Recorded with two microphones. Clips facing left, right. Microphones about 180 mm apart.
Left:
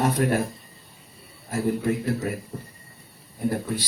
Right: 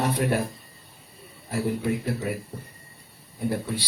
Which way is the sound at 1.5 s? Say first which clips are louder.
Left 2 dB; 45° left (ahead or behind).